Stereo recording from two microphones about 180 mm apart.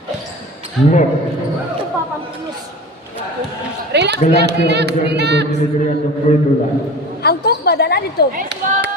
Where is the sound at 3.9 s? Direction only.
70° right (ahead or behind).